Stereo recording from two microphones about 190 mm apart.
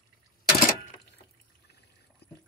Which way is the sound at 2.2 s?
60° left (ahead or behind).